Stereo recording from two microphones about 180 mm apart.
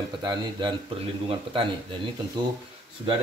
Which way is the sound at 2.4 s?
25° right (ahead or behind).